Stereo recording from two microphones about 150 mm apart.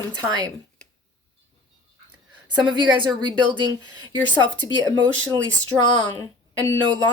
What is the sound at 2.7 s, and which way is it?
A woman's voice, 30° right (ahead or behind).